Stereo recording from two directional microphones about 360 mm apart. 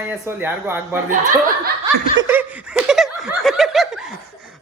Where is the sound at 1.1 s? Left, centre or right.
Right.